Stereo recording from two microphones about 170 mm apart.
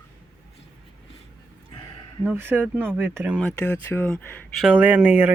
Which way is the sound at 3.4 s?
10° left (ahead or behind).